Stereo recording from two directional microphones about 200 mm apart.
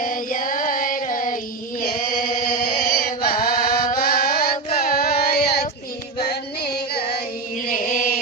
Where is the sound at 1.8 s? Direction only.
45° left (ahead or behind).